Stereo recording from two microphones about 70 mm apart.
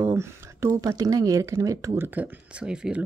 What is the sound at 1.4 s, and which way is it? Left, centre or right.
Speech, right.